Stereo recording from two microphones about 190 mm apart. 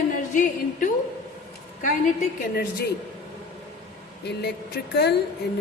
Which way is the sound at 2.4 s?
55° left (ahead or behind).